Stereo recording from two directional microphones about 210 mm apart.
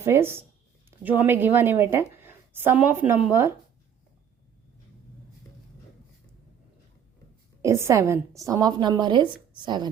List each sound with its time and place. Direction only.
0.0 s a woman's voice: 10° right (ahead or behind)
7.6 s a woman's voice: 15° right (ahead or behind)